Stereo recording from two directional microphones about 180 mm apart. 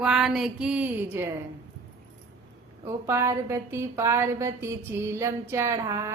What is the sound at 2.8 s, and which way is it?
A woman's voice, 15° right (ahead or behind).